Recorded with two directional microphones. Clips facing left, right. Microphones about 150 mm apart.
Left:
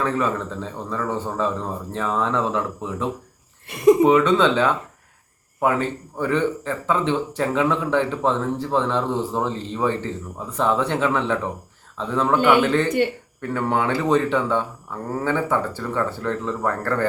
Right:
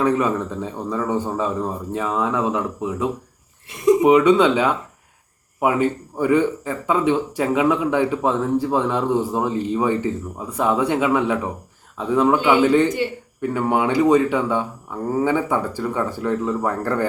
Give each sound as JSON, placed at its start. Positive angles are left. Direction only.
{"t": 0.0, "sound": "speech", "side_deg": -15}
{"t": 3.7, "sound": "speech", "side_deg": 60}
{"t": 4.0, "sound": "speech", "side_deg": -15}